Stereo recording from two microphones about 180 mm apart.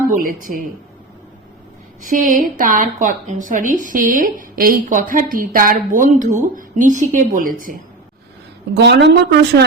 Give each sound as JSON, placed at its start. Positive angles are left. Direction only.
{"t": 0.2, "sound": "speech", "side_deg": -50}
{"t": 2.0, "sound": "speech", "side_deg": -50}
{"t": 8.7, "sound": "speech", "side_deg": -70}